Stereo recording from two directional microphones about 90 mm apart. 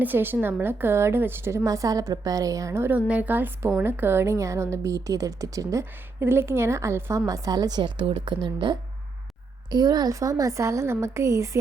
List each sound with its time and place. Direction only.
0.0 s a woman's voice: 20° right (ahead or behind)
2.9 s a woman's voice: 15° right (ahead or behind); by 8.8 s 60° right (ahead or behind)
9.6 s a woman's voice: 50° right (ahead or behind)